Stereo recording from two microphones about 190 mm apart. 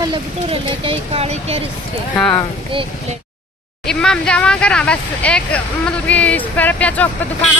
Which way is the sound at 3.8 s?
5° left (ahead or behind).